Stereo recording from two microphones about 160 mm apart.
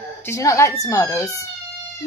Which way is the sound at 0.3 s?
20° left (ahead or behind).